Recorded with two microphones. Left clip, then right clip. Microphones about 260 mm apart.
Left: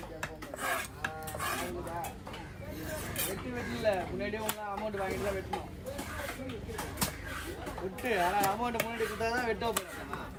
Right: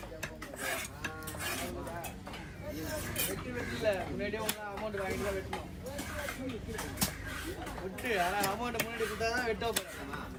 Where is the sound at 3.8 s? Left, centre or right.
Left.